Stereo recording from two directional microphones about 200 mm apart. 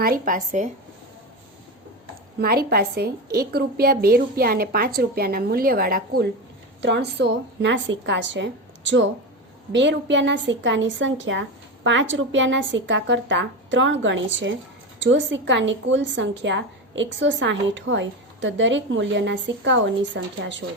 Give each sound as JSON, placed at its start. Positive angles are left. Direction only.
{"t": 0.0, "sound": "speech", "side_deg": -45}
{"t": 2.4, "sound": "a woman's voice", "side_deg": -50}
{"t": 6.8, "sound": "a woman's voice", "side_deg": -60}